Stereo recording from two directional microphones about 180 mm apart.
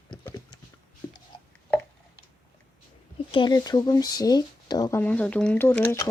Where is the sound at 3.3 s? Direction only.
25° left (ahead or behind).